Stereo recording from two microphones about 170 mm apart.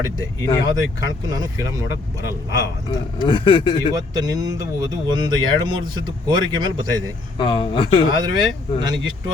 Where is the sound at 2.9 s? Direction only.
25° left (ahead or behind).